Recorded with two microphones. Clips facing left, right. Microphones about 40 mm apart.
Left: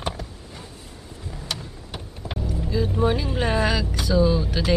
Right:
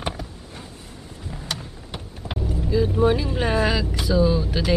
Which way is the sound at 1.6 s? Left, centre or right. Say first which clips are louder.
Right 1 dB; centre.